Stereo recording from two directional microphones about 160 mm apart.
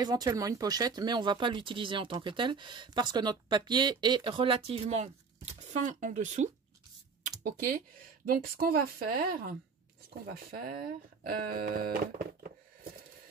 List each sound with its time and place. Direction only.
0.0 s speech: 25° right (ahead or behind); by 6.5 s 45° right (ahead or behind)
7.2 s computer keyboard: 55° right (ahead or behind)
8.3 s speech: 65° right (ahead or behind)
11.2 s a sound: 60° right (ahead or behind)